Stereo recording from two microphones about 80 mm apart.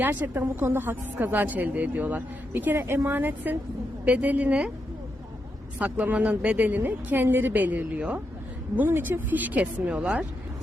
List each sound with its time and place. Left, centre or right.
0.0 s a woman's voice: right
5.8 s a woman's voice: centre